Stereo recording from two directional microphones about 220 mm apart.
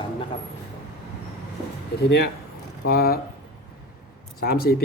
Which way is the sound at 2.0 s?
50° left (ahead or behind).